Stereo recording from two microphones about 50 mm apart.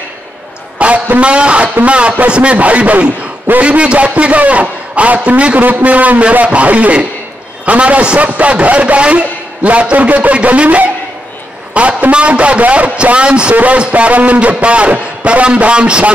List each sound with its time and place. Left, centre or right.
0.7 s a man's voice: right